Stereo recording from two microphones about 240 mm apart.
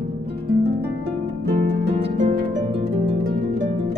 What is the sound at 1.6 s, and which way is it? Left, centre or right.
Harp, right.